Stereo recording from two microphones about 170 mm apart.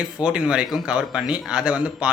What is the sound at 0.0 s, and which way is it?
A man's voice, 5° right (ahead or behind).